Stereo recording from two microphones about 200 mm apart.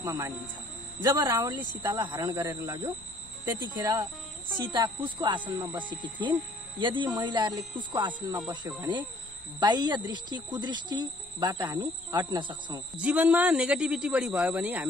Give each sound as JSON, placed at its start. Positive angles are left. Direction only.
{"t": 0.0, "sound": "speech", "side_deg": -15}
{"t": 12.9, "sound": "speech", "side_deg": -5}